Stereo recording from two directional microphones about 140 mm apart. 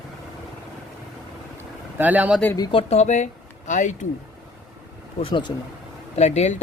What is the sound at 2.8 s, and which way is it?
Speech, 50° left (ahead or behind).